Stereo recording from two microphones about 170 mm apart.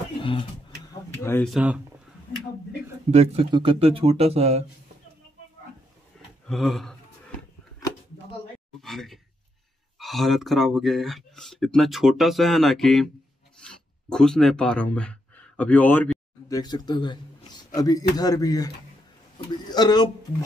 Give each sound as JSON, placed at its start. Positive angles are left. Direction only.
{"t": 0.2, "sound": "speech", "side_deg": 30}
{"t": 1.4, "sound": "speech", "side_deg": -5}
{"t": 3.1, "sound": "speech", "side_deg": -40}
{"t": 6.4, "sound": "speech", "side_deg": 0}
{"t": 8.8, "sound": "speech", "side_deg": 0}
{"t": 19.7, "sound": "speech", "side_deg": 25}